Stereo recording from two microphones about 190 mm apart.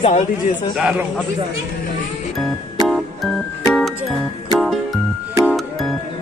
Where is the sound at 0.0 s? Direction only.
35° left (ahead or behind).